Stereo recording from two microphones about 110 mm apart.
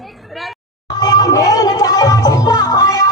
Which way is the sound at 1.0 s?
35° left (ahead or behind).